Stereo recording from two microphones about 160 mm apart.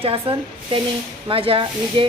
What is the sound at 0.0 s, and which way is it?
A woman's voice, 35° right (ahead or behind).